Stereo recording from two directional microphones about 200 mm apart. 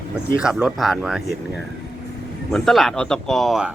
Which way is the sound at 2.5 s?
Centre (ahead or behind).